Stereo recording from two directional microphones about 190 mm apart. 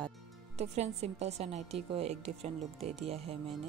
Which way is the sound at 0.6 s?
35° right (ahead or behind).